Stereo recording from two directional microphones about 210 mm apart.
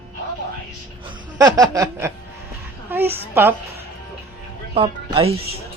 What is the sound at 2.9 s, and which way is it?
Speech, 10° right (ahead or behind).